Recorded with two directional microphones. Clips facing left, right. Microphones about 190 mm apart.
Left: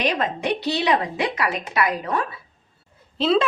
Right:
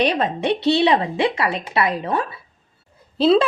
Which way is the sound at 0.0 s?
30° right (ahead or behind).